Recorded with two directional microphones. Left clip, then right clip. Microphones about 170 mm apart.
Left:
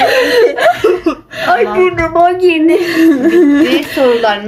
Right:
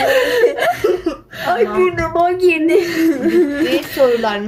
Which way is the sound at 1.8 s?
15° right (ahead or behind).